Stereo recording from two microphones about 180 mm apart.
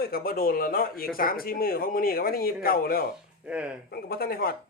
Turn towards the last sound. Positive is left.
turn(degrees=55)  # may be behind; listen again after turning